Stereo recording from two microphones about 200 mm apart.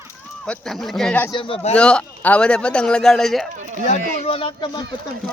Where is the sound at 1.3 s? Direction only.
25° left (ahead or behind).